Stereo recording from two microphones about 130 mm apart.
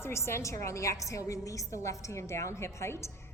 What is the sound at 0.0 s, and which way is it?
A woman's voice, 20° left (ahead or behind).